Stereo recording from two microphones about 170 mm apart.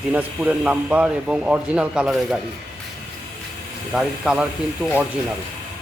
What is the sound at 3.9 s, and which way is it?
Speech, 5° right (ahead or behind).